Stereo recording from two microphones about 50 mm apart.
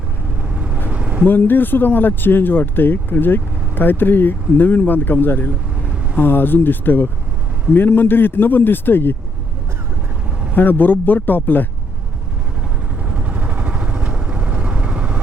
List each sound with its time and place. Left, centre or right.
0.4 s vehicle: right
1.3 s speech: left
10.5 s speech: left
13.1 s vehicle: right